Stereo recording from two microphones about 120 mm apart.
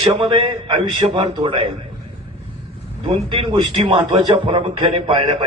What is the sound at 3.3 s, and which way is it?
A man's voice, 45° right (ahead or behind).